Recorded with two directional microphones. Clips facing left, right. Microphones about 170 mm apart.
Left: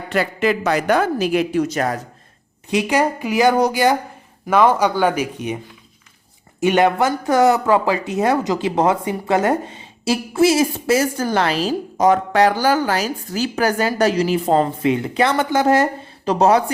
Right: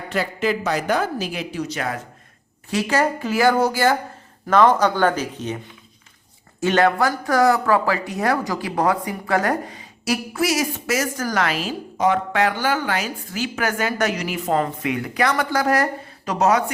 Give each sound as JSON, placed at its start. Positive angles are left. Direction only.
{"t": 0.1, "sound": "a woman's voice", "side_deg": 65}
{"t": 2.6, "sound": "speech", "side_deg": 15}
{"t": 6.6, "sound": "speech", "side_deg": 20}